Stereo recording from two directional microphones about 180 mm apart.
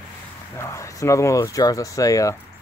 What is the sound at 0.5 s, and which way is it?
Speech, 15° left (ahead or behind).